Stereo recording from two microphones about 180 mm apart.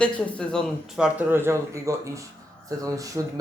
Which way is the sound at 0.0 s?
5° left (ahead or behind).